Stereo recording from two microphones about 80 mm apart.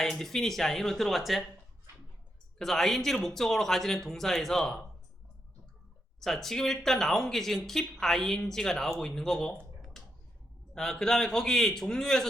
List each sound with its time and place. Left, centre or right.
0.0 s speech: centre
2.6 s speech: centre
6.1 s speech: centre
10.0 s a sound: centre
10.8 s speech: centre